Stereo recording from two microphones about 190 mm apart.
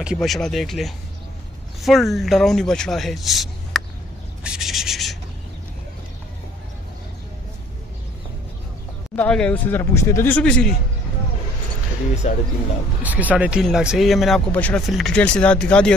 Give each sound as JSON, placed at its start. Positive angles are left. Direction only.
{"t": 0.0, "sound": "speech", "side_deg": 0}
{"t": 4.4, "sound": "a sound", "side_deg": -5}
{"t": 9.1, "sound": "speech", "side_deg": 5}
{"t": 12.2, "sound": "speech", "side_deg": 35}
{"t": 13.0, "sound": "speech", "side_deg": -10}